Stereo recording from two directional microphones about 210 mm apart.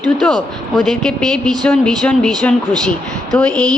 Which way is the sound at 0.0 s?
Centre (ahead or behind).